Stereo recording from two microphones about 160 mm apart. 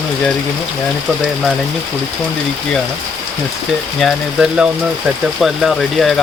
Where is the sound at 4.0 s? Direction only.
Centre (ahead or behind).